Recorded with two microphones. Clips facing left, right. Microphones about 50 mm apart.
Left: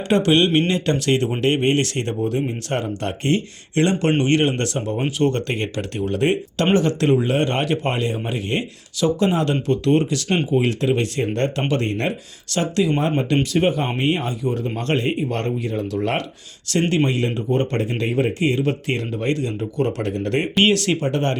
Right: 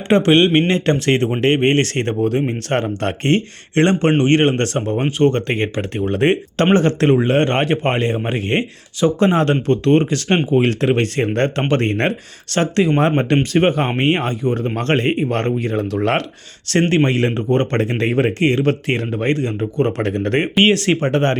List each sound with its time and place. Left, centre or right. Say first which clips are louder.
0.1 s speech: right 4 dB; right
6.1 s speech: right 4 dB; right
16.9 s speech: right 4 dB; right
20.0 s speech: right 4 dB; right
20.6 s speech: right 3 dB; right